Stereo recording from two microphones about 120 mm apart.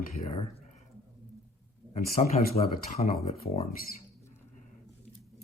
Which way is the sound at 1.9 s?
65° left (ahead or behind).